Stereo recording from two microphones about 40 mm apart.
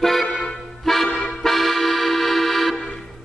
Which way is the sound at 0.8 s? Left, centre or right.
Centre.